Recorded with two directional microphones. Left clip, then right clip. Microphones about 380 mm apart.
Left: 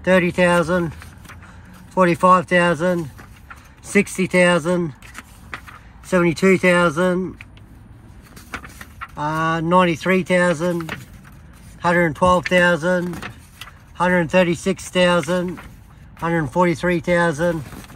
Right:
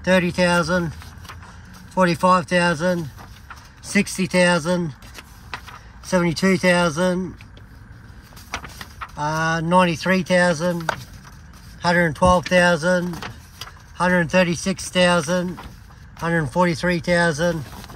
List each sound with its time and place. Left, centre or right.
0.0 s speech: centre
2.0 s speech: centre
4.2 s speech: centre
6.7 s speech: centre
8.6 s vehicle: right
9.1 s speech: centre
11.8 s speech: centre